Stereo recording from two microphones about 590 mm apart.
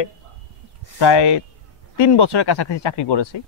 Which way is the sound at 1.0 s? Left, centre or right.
Left.